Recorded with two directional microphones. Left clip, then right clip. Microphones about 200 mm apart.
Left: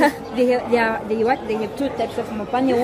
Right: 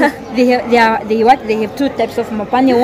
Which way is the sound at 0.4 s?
55° right (ahead or behind).